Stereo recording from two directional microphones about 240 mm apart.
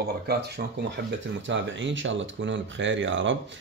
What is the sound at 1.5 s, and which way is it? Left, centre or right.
Speech, right.